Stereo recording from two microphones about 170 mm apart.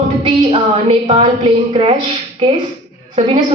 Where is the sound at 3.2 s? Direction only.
30° right (ahead or behind).